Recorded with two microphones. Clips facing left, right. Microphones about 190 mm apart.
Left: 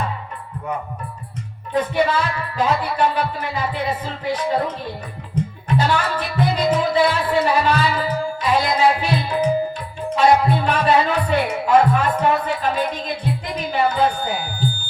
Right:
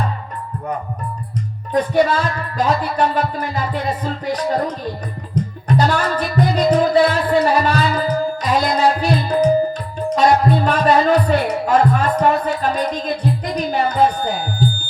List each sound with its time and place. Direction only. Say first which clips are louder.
1.7 s music: right 3 dB; 40° right (ahead or behind)
10.1 s speech: right 1 dB; 40° right (ahead or behind)